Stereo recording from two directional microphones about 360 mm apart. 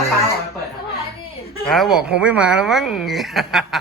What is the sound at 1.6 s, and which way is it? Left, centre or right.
Speech, centre.